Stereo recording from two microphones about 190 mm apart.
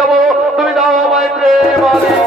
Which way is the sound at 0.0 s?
Centre (ahead or behind).